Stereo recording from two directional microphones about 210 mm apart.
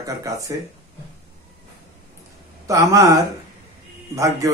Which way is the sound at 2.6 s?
15° right (ahead or behind).